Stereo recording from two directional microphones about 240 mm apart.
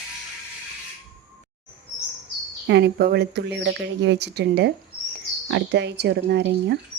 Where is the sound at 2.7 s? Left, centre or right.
Right.